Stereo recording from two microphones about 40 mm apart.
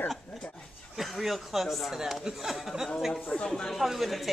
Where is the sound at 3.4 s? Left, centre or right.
Centre.